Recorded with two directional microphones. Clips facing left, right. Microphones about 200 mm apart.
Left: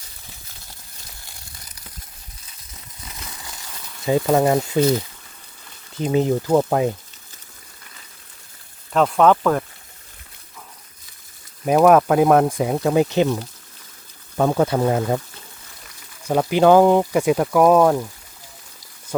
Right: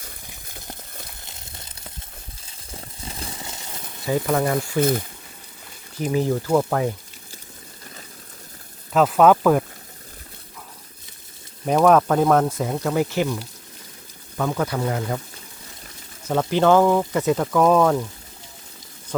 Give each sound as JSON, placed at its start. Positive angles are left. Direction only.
{"t": 1.2, "sound": "crumpling", "side_deg": -25}
{"t": 2.4, "sound": "a sound", "side_deg": -30}
{"t": 4.0, "sound": "speech", "side_deg": 20}
{"t": 4.8, "sound": "speech", "side_deg": -55}
{"t": 6.0, "sound": "speech", "side_deg": 20}
{"t": 8.9, "sound": "speech", "side_deg": -5}
{"t": 11.6, "sound": "speech", "side_deg": 5}
{"t": 14.3, "sound": "speech", "side_deg": 30}
{"t": 16.2, "sound": "speech", "side_deg": 15}